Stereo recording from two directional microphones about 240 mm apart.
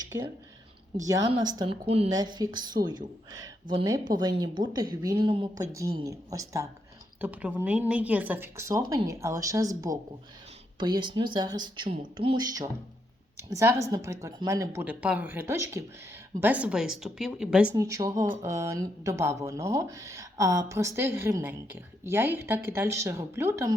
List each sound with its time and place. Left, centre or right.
1.0 s speech: centre